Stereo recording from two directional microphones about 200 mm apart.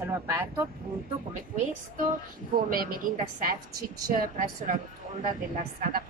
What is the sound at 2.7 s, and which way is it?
A woman's voice, 45° right (ahead or behind).